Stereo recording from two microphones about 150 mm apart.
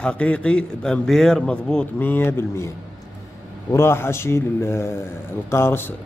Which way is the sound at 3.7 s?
15° left (ahead or behind).